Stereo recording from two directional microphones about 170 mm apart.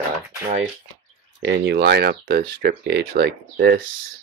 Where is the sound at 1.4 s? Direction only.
90° right; by 3.8 s 60° right (ahead or behind).